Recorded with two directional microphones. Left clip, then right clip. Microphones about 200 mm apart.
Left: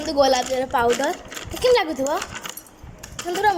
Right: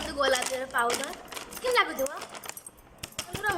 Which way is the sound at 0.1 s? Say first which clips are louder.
Left 9 dB; 25° left (ahead or behind).